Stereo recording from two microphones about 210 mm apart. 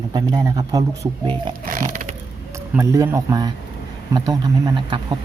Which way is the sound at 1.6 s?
40° right (ahead or behind).